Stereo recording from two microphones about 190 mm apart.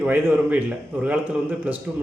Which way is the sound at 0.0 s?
10° right (ahead or behind).